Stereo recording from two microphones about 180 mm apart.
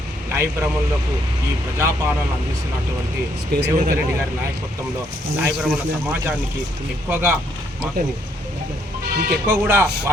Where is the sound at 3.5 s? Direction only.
65° right (ahead or behind).